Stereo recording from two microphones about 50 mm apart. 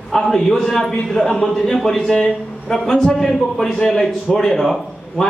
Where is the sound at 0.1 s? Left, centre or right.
Centre.